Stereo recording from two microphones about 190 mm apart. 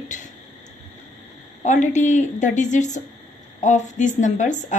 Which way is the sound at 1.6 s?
40° left (ahead or behind).